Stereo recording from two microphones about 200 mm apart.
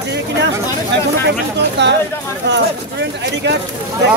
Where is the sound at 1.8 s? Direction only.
60° right (ahead or behind).